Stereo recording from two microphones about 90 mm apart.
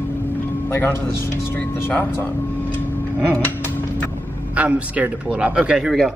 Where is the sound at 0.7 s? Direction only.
25° left (ahead or behind).